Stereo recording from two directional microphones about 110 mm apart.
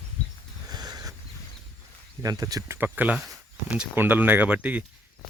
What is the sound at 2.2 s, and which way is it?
Speech, 35° right (ahead or behind).